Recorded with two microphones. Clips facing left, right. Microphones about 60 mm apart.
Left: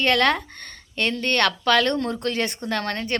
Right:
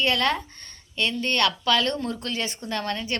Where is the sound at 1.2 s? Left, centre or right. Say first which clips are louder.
Left 2 dB; left.